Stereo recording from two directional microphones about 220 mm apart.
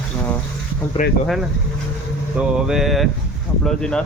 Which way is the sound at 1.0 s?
35° left (ahead or behind).